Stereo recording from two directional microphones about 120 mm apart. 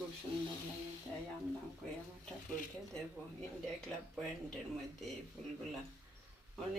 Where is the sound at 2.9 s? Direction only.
5° left (ahead or behind).